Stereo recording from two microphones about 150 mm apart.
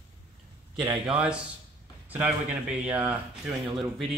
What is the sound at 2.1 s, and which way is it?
Speech, 10° right (ahead or behind).